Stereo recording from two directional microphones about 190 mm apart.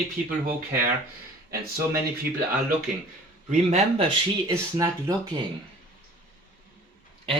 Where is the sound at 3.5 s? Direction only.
35° right (ahead or behind).